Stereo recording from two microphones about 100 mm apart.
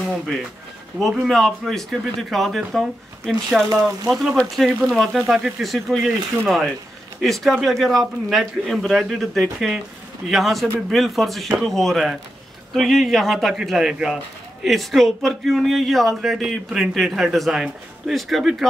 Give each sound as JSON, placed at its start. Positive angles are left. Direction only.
{"t": 1.2, "sound": "speech", "side_deg": 0}
{"t": 3.6, "sound": "speech", "side_deg": -35}
{"t": 4.1, "sound": "speech", "side_deg": 0}